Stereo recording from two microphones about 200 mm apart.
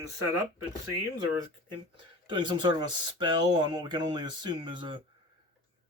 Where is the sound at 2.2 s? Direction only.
25° right (ahead or behind).